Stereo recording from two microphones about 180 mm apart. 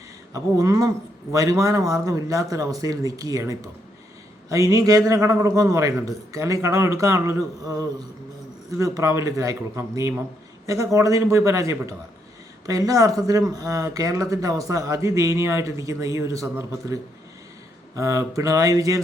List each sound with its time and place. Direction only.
0.3 s speech: 20° right (ahead or behind)